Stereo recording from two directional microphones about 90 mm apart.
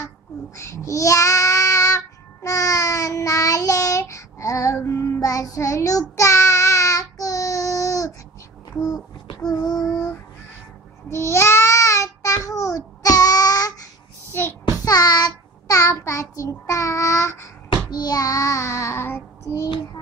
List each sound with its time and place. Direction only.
0.6 s child singing: 35° left (ahead or behind)
9.5 s child singing: 45° left (ahead or behind)
11.1 s babbling: 30° left (ahead or behind)
14.9 s child singing: 45° left (ahead or behind)
17.9 s child singing: 45° left (ahead or behind); by 19.6 s 25° left (ahead or behind)